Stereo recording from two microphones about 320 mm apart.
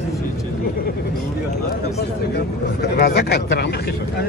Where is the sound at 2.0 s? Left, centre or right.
Left.